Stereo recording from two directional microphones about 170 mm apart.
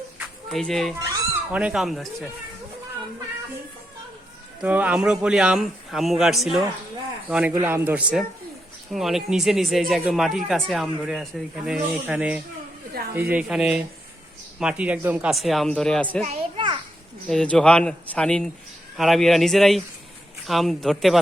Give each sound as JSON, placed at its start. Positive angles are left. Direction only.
{"t": 0.4, "sound": "speech", "side_deg": 0}
{"t": 4.6, "sound": "speech", "side_deg": -10}
{"t": 16.2, "sound": "children playing", "side_deg": -35}
{"t": 17.2, "sound": "speech", "side_deg": 5}